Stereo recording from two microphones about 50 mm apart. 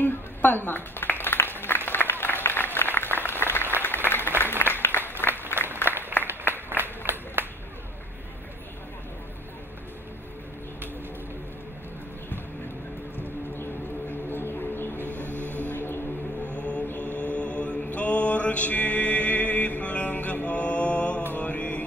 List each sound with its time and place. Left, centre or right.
0.0 s a sound: left
1.9 s applause: left
5.3 s applause: right
5.9 s a sound: right
14.3 s music: left
15.1 s music: right
15.6 s music: left
16.4 s mantra: left